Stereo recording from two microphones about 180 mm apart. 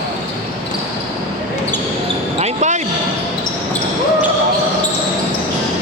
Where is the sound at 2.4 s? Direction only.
40° right (ahead or behind).